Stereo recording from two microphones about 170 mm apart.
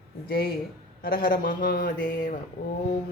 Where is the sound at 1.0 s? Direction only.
55° left (ahead or behind).